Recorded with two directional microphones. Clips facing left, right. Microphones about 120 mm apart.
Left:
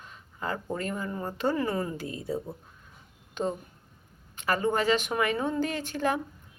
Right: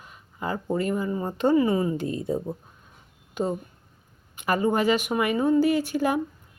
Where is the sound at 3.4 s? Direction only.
10° right (ahead or behind).